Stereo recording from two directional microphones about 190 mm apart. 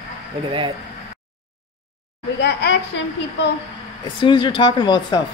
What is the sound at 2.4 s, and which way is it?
Speech, 60° left (ahead or behind).